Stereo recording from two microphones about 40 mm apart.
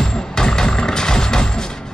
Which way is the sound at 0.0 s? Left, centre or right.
Centre.